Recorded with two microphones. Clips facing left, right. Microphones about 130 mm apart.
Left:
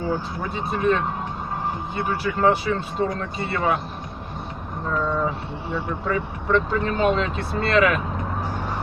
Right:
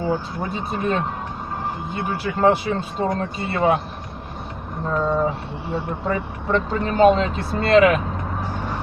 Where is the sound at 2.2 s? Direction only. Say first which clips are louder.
Right 2 dB; 30° right (ahead or behind).